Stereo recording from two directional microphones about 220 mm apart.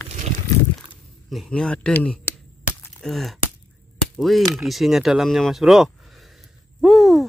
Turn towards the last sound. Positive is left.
turn(degrees=0)  # may be behind; listen again after turning